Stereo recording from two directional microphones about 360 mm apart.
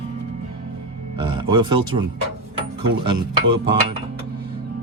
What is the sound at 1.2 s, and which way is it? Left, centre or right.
Speech, centre.